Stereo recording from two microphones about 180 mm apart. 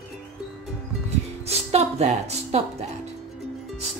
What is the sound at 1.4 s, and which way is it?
Music, 35° right (ahead or behind).